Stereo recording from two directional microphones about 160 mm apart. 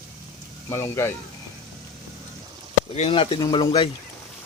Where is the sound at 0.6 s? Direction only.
20° left (ahead or behind).